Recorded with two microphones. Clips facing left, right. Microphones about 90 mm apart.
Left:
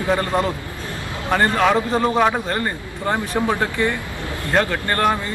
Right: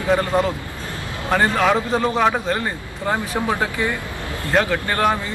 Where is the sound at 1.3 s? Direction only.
Centre (ahead or behind).